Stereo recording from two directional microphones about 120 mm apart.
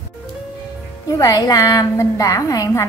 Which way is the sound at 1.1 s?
30° left (ahead or behind).